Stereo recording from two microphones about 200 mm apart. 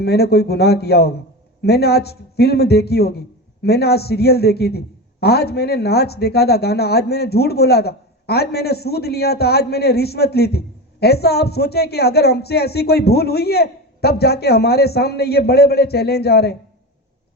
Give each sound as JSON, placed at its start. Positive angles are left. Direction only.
{"t": 0.0, "sound": "speech", "side_deg": 55}